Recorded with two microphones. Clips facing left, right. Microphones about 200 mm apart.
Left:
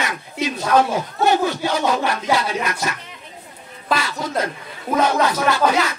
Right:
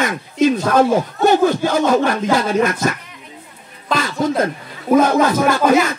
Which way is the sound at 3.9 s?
50° right (ahead or behind).